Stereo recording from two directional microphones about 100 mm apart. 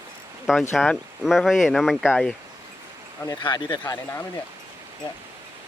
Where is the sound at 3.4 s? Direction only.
50° left (ahead or behind).